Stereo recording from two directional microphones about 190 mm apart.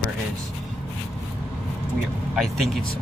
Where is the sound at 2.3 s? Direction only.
Centre (ahead or behind).